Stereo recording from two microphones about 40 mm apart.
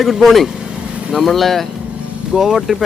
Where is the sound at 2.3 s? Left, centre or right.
Centre.